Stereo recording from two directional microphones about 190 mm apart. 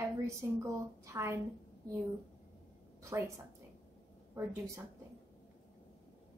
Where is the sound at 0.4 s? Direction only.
15° right (ahead or behind).